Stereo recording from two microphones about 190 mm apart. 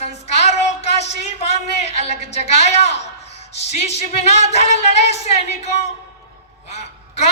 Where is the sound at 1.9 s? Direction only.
35° left (ahead or behind).